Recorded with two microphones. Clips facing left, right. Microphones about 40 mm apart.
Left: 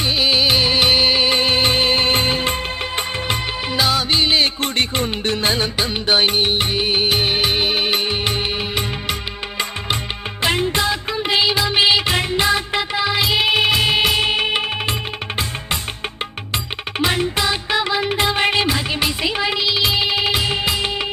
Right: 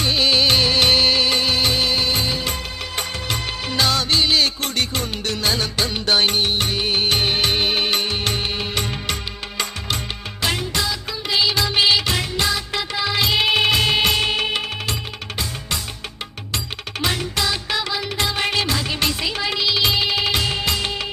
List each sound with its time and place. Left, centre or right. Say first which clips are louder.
0.0 s music: left 1 dB; centre
3.8 s music: left 1 dB; centre
10.4 s music of bollywood: left 4 dB; left
11.5 s music of bollywood: left 2 dB; centre
12.1 s music: left 4 dB; left
13.2 s music: right 1 dB; centre
17.3 s music of bollywood: left 3 dB; left